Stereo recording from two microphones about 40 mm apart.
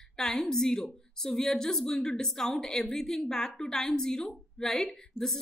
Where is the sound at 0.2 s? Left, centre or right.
Centre.